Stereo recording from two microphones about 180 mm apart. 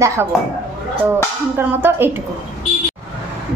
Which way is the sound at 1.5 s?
10° right (ahead or behind).